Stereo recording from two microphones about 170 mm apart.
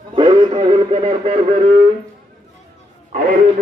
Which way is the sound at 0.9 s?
35° right (ahead or behind).